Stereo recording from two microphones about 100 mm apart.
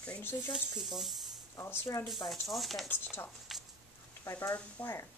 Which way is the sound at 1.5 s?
25° left (ahead or behind).